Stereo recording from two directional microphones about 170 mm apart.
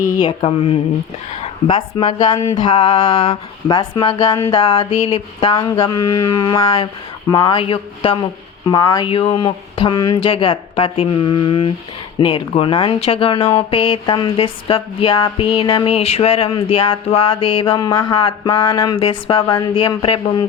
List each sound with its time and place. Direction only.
0.3 s speech: 35° left (ahead or behind)
4.9 s speech: 40° left (ahead or behind)